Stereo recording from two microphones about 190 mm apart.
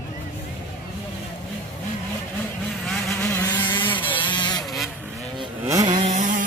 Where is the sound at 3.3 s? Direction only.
15° left (ahead or behind).